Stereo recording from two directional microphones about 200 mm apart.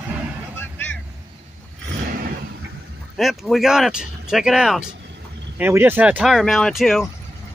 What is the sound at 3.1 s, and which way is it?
Speech, centre (ahead or behind).